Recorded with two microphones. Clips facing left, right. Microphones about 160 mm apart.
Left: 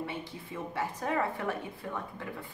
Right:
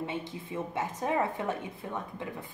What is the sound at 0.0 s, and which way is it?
A woman's voice, 20° right (ahead or behind).